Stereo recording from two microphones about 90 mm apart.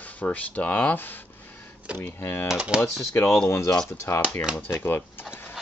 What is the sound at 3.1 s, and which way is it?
Speech, 25° left (ahead or behind).